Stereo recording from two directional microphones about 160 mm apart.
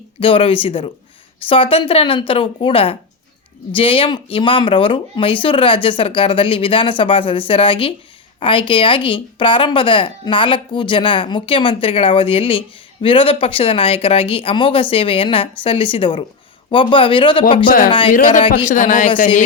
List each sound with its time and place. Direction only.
0.2 s speech: 35° left (ahead or behind)
17.7 s a man's voice: 60° left (ahead or behind)